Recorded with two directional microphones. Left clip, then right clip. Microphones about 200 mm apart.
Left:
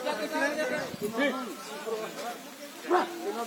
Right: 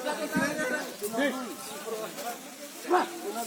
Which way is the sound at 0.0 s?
50° right (ahead or behind).